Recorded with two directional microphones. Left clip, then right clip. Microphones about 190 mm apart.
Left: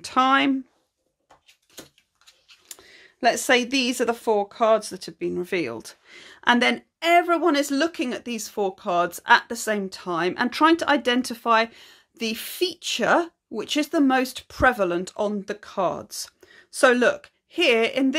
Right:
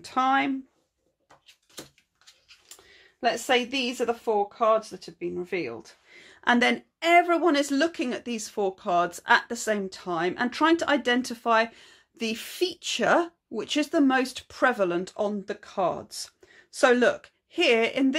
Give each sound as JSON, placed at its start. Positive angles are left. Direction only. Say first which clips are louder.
{"t": 0.0, "sound": "speech", "louder": "left 4 dB", "side_deg": 30}
{"t": 2.7, "sound": "speech", "louder": "left 7 dB", "side_deg": 50}